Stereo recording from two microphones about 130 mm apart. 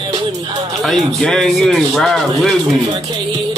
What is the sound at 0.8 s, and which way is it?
Speech, 5° left (ahead or behind).